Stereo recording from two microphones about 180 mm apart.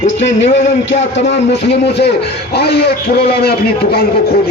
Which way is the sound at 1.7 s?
70° left (ahead or behind).